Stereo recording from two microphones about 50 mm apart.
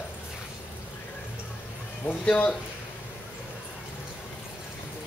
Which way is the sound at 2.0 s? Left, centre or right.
Left.